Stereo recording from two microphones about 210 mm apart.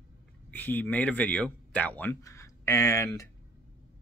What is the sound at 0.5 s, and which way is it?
Speech, 10° left (ahead or behind).